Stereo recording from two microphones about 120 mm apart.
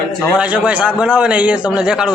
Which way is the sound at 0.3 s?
10° right (ahead or behind).